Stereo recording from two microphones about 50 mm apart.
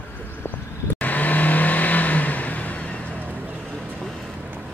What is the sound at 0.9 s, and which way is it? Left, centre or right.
Vehicle, left.